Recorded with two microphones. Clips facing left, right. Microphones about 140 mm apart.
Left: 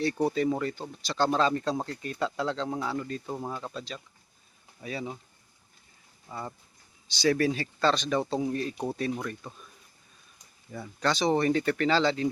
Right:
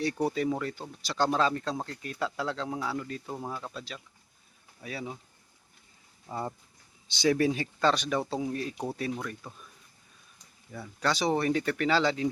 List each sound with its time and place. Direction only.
0.0 s speech: 10° right (ahead or behind)
6.2 s speech: 25° right (ahead or behind); by 9.6 s 5° right (ahead or behind)
10.7 s speech: 5° right (ahead or behind)